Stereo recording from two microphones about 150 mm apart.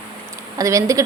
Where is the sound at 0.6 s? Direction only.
20° right (ahead or behind).